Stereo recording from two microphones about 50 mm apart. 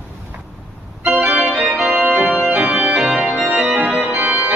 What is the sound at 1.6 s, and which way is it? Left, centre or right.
Organ, centre.